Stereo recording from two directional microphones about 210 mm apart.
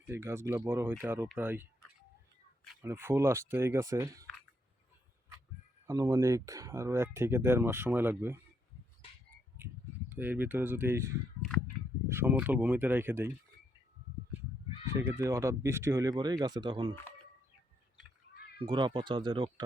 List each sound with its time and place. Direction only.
0.1 s speech: 10° right (ahead or behind)
2.8 s speech: 10° right (ahead or behind)
5.8 s speech: 15° right (ahead or behind)
10.1 s speech: 10° right (ahead or behind)
14.9 s speech: 15° right (ahead or behind)
18.6 s speech: 20° right (ahead or behind)